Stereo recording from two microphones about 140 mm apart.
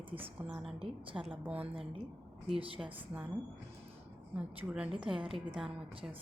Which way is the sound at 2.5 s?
40° right (ahead or behind).